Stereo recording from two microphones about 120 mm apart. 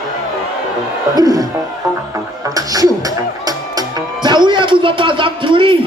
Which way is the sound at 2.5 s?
30° right (ahead or behind).